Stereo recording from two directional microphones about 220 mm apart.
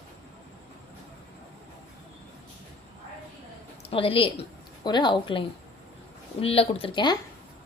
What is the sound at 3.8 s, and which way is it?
Speech, 25° left (ahead or behind).